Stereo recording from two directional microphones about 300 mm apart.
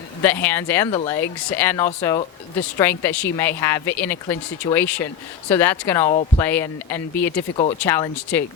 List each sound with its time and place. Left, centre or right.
0.2 s speech: centre
6.1 s speech: centre
6.4 s speech: centre
7.5 s speech: left
7.8 s speech: centre